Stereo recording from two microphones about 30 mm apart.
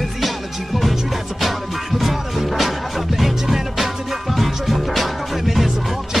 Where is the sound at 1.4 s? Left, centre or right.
Centre.